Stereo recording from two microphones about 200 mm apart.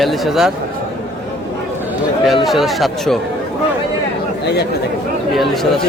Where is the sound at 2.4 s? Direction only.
Centre (ahead or behind).